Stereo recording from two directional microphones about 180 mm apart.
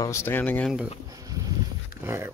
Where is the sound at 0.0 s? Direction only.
15° left (ahead or behind).